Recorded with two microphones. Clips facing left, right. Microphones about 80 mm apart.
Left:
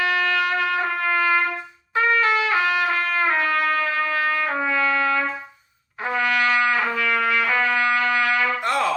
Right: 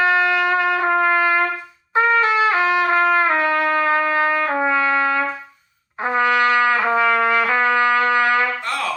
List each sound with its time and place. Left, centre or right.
0.0 s trumpet: right
8.6 s music: left